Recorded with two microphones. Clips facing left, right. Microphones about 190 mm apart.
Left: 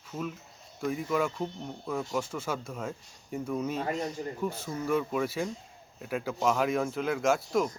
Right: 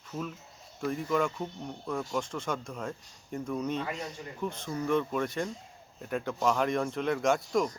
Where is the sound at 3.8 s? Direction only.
40° left (ahead or behind).